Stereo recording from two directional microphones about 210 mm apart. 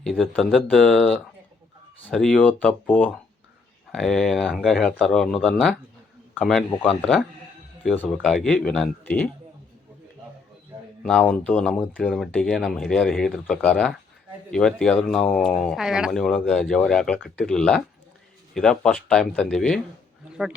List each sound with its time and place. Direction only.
0.0 s speech: centre (ahead or behind)
11.0 s a man's voice: 5° left (ahead or behind)